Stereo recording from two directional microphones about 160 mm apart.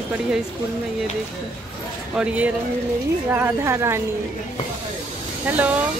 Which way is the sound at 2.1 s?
5° right (ahead or behind).